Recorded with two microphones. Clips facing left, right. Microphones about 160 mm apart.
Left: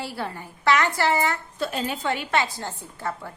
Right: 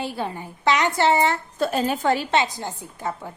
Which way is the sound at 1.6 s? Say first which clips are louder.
Right 7 dB; 45° right (ahead or behind).